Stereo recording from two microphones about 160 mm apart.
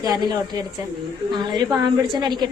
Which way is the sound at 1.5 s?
25° right (ahead or behind).